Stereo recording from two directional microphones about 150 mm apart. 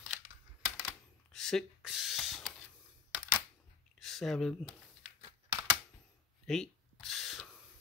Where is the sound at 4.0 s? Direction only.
Centre (ahead or behind).